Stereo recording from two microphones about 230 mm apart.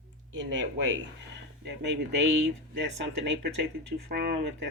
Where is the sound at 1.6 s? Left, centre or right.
Right.